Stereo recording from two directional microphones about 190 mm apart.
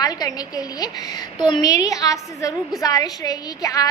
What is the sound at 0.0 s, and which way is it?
A woman's voice, 20° left (ahead or behind).